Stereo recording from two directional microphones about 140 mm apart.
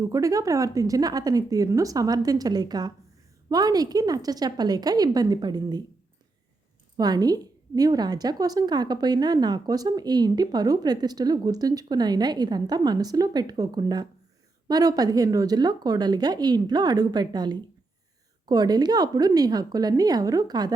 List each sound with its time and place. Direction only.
0.0 s a woman's voice: 25° right (ahead or behind)
6.9 s a woman's voice: 30° right (ahead or behind)